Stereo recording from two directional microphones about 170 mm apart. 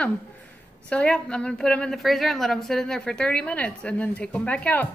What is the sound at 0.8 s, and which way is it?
A woman's voice, 5° left (ahead or behind).